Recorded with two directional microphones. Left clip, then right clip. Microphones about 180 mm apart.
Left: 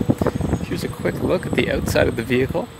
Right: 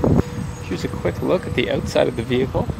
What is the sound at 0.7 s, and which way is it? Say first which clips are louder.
Speech: right 6 dB; centre (ahead or behind).